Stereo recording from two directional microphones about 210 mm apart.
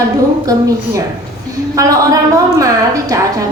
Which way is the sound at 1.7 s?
15° right (ahead or behind).